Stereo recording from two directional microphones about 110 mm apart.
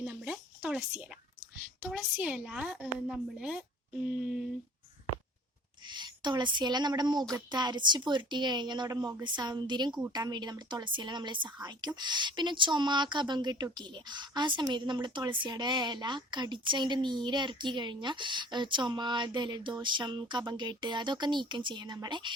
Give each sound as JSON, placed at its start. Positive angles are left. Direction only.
{"t": 0.0, "sound": "a sound", "side_deg": -10}
{"t": 1.8, "sound": "a woman's voice", "side_deg": -5}
{"t": 5.9, "sound": "speech", "side_deg": -40}